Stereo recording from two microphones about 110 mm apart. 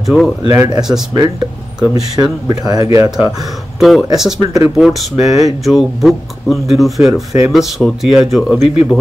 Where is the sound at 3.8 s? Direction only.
Centre (ahead or behind).